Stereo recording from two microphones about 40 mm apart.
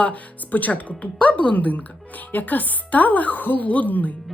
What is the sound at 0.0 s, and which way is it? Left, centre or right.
Speech, left.